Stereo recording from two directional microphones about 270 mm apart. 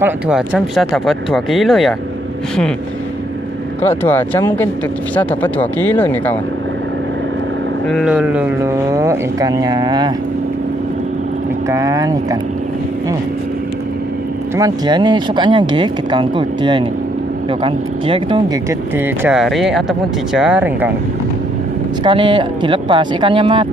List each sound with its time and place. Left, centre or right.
0.0 s speech: centre
3.8 s speech: centre
7.9 s speech: centre
11.7 s speech: centre
14.6 s speech: centre
22.0 s speech: centre